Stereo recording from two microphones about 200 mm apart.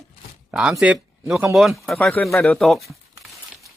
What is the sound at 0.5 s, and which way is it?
Speech, 5° right (ahead or behind).